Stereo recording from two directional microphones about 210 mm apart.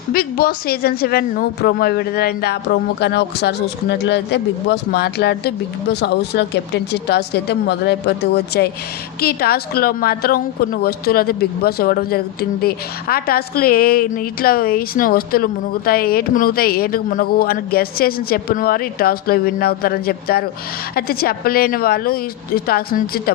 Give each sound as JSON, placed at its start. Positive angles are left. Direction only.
{"t": 0.1, "sound": "a woman's voice", "side_deg": 45}